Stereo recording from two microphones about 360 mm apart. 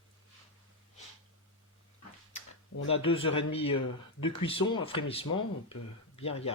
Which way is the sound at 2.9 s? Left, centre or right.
Centre.